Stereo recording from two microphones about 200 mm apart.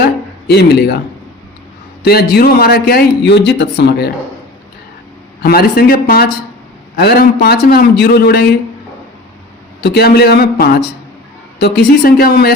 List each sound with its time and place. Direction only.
0.0 s a sound: 55° left (ahead or behind)
2.0 s a man's voice: 50° left (ahead or behind)
5.4 s a man's voice: 50° left (ahead or behind)
9.8 s a man's voice: 55° left (ahead or behind)